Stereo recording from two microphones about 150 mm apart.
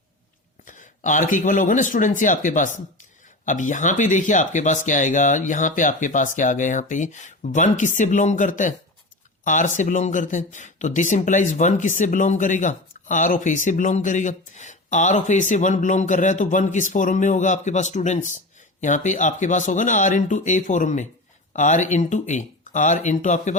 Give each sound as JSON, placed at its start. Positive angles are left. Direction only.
{"t": 0.7, "sound": "speech", "side_deg": 55}